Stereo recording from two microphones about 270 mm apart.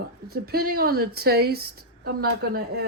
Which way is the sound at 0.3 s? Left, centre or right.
Right.